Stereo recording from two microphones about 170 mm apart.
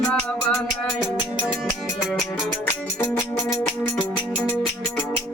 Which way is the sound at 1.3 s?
5° right (ahead or behind).